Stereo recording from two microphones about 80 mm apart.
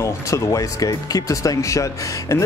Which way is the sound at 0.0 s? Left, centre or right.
Left.